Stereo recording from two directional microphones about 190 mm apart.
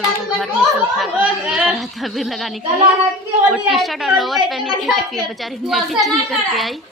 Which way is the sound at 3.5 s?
Centre (ahead or behind).